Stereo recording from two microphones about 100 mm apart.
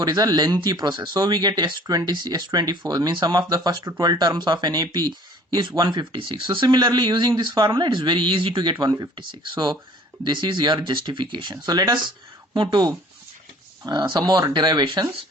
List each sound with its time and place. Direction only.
0.0 s speech: 40° right (ahead or behind)
8.8 s speech: 35° right (ahead or behind)
9.1 s speech: 50° right (ahead or behind)
11.5 s speech: 40° right (ahead or behind)